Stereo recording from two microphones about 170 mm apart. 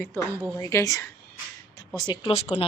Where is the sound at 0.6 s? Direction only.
20° left (ahead or behind).